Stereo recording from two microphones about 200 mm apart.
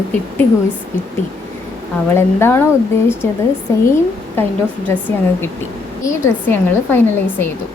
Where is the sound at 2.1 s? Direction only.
10° left (ahead or behind).